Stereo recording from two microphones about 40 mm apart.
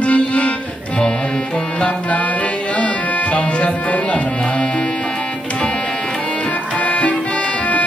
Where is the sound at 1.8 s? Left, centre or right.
Left.